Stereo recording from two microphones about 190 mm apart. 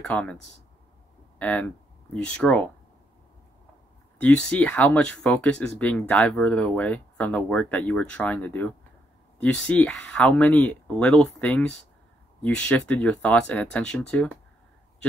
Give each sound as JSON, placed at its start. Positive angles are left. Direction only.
{"t": 0.0, "sound": "speech", "side_deg": 5}
{"t": 1.4, "sound": "speech", "side_deg": 5}
{"t": 4.2, "sound": "speech", "side_deg": 5}